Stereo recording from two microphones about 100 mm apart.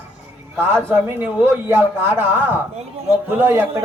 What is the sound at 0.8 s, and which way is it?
Speech, 20° right (ahead or behind).